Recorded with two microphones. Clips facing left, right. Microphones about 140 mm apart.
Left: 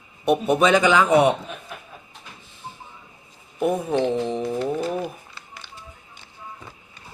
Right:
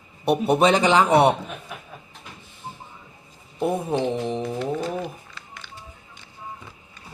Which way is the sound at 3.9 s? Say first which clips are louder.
Left 2 dB; 10° right (ahead or behind).